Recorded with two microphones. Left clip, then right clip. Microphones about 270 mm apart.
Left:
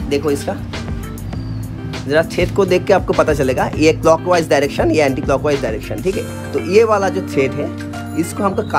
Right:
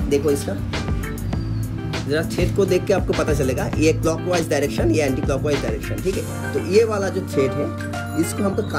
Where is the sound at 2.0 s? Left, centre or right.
Left.